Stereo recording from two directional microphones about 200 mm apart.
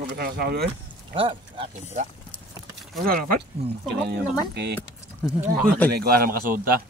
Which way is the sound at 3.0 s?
45° right (ahead or behind).